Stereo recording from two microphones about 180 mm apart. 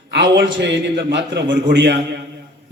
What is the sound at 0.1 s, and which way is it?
A man's voice, 75° right (ahead or behind).